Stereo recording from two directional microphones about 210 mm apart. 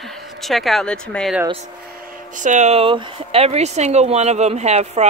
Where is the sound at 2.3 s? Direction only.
35° right (ahead or behind).